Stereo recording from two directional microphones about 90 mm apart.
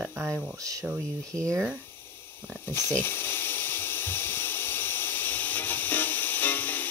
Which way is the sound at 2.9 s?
25° left (ahead or behind).